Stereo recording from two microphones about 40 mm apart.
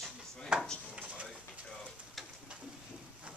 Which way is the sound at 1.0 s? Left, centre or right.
Right.